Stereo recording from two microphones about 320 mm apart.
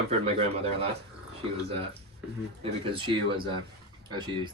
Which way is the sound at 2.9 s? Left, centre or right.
Centre.